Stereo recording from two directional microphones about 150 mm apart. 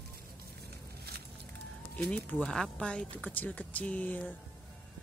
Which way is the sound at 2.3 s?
5° left (ahead or behind).